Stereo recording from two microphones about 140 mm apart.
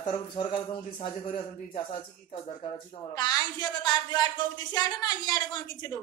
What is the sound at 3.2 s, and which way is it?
A man's voice, 30° left (ahead or behind).